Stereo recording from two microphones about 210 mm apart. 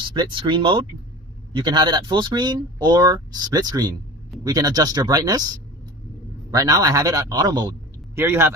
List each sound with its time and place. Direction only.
0.1 s speech: 20° right (ahead or behind)
6.5 s a man's voice: 15° right (ahead or behind)